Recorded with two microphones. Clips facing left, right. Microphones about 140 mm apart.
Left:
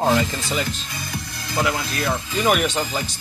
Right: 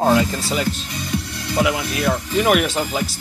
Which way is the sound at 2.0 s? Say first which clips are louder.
Right 4 dB; 5° right (ahead or behind).